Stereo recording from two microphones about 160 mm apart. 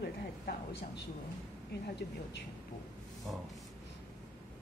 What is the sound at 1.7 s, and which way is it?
Speech, 90° left.